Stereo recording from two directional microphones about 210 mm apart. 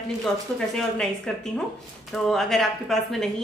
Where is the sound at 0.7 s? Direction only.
Centre (ahead or behind).